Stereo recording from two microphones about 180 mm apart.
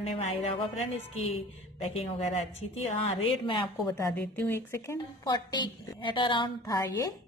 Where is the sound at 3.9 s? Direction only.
10° left (ahead or behind).